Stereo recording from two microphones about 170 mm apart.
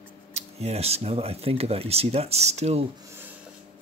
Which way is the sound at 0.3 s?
40° right (ahead or behind).